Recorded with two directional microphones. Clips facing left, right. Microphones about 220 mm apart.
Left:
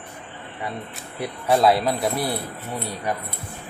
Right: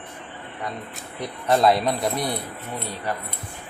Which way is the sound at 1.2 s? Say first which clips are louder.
Left 1 dB; centre (ahead or behind).